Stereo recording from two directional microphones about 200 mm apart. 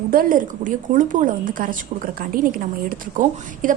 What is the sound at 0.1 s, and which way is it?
A woman's voice, 45° right (ahead or behind).